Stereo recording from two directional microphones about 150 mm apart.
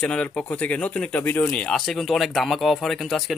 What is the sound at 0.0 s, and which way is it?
Speech, 10° left (ahead or behind).